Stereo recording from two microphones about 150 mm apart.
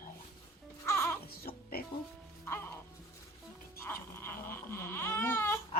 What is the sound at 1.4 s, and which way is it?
Music, 90° left.